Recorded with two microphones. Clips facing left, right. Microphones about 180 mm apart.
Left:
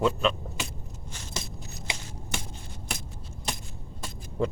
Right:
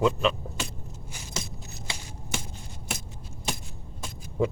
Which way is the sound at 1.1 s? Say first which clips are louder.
Right 1 dB; 10° right (ahead or behind).